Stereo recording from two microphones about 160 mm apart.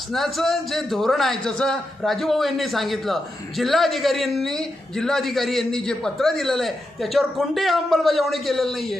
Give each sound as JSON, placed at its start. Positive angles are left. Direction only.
{"t": 0.1, "sound": "a man's voice", "side_deg": 0}